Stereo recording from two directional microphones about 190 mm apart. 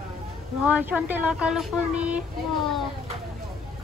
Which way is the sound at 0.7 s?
5° right (ahead or behind).